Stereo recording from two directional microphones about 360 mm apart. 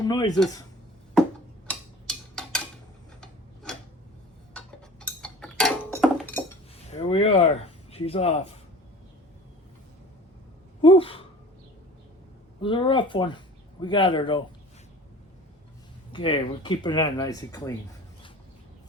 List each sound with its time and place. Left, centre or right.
0.0 s speech: centre
1.6 s tick-tock: centre
6.9 s a sound: centre
7.9 s speech: centre
10.8 s speech: centre
12.6 s speech: centre
16.1 s speech: centre